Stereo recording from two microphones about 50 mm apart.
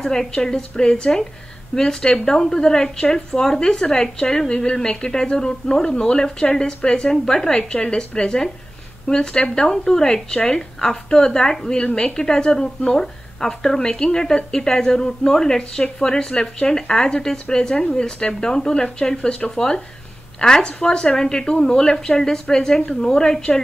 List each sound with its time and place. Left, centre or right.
0.0 s a woman's voice: centre